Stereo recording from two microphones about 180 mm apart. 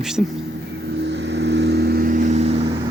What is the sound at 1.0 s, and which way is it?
Vehicle, 75° right (ahead or behind).